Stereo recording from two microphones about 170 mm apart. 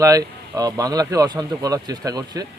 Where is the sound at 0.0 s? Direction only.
20° right (ahead or behind).